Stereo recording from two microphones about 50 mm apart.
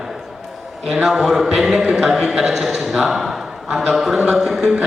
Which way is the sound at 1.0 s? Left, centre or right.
Centre.